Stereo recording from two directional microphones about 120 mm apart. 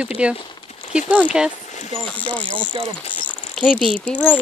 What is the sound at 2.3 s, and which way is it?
Speech, 10° left (ahead or behind).